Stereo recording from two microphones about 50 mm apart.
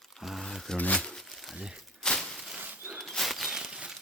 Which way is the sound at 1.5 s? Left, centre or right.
Centre.